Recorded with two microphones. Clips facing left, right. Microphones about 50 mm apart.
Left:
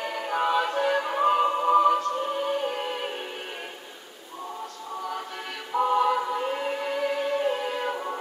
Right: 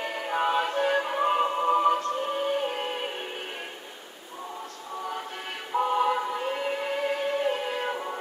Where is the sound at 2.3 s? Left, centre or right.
Right.